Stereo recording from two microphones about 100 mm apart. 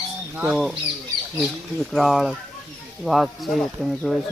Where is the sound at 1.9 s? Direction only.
Centre (ahead or behind).